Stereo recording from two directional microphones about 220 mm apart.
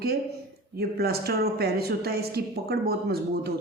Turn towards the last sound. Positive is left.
turn(degrees=-45)  # may be behind; listen again after turning